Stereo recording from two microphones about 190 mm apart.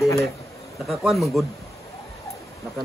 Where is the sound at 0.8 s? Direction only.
Centre (ahead or behind).